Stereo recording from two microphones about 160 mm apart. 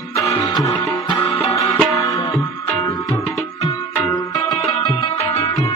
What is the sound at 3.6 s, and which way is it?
Music, 20° left (ahead or behind).